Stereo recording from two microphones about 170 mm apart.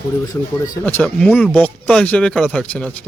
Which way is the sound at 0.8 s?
10° left (ahead or behind).